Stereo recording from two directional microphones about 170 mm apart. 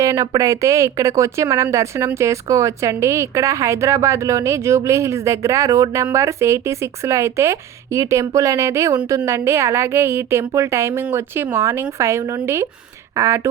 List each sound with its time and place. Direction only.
0.0 s speech: 20° right (ahead or behind)